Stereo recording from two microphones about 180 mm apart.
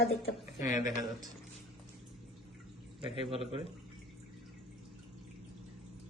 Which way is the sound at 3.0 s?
30° right (ahead or behind).